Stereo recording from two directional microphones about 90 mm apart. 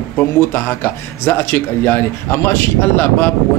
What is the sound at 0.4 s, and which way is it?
Speech, 25° left (ahead or behind).